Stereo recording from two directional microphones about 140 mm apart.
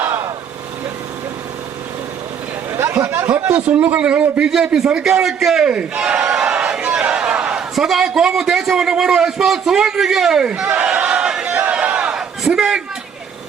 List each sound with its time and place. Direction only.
0.0 s vehicle: 20° right (ahead or behind)
2.7 s a man's voice: 15° right (ahead or behind)